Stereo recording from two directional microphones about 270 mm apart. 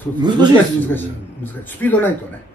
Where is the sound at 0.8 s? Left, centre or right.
Centre.